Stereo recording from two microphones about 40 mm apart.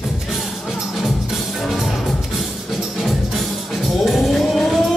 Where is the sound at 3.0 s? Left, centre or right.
Centre.